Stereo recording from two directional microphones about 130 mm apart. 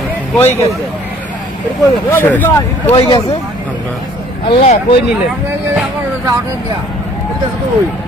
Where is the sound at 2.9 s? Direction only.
40° left (ahead or behind).